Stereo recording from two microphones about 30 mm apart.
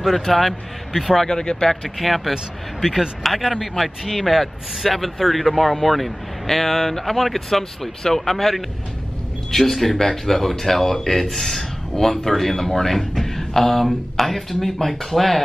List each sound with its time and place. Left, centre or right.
0.2 s speech: centre
1.2 s speech: left
2.0 s speech: centre